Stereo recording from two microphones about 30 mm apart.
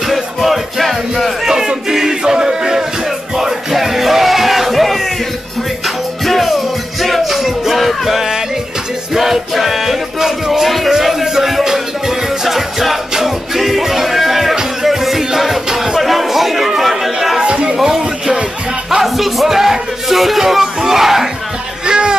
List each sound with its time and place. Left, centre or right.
0.1 s music: centre
1.4 s battle cry: centre
1.9 s music: centre
3.7 s music: centre
6.2 s music: centre
14.5 s music: centre
14.9 s music: centre
16.0 s chatter: centre
17.4 s music: right
19.0 s a sound: centre
21.8 s music: right